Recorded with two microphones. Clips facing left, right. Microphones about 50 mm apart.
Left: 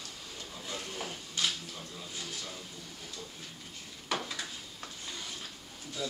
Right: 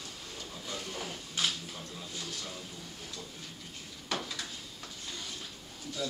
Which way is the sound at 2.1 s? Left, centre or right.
Centre.